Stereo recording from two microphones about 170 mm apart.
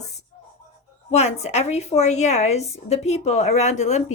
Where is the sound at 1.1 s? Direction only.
40° left (ahead or behind).